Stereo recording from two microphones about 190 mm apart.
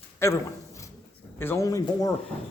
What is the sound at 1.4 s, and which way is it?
Speech, 15° left (ahead or behind).